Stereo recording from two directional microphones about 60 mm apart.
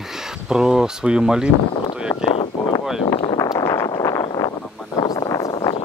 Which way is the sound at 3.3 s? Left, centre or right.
Left.